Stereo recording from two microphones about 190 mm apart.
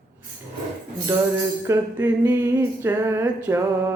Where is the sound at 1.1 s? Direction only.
15° right (ahead or behind).